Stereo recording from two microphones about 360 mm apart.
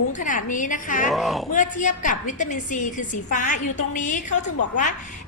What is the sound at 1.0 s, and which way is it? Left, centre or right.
Speech, centre.